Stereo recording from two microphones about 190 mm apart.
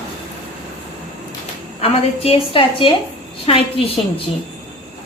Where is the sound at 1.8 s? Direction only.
30° left (ahead or behind).